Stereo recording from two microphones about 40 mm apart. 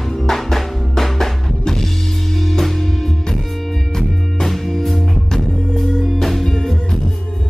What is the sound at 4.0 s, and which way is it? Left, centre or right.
Music, centre.